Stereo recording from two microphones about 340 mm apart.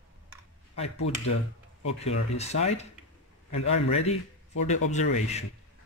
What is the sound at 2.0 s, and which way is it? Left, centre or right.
A man's voice, centre.